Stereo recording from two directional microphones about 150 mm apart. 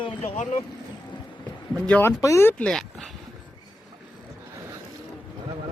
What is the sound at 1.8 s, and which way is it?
Speech, 10° left (ahead or behind).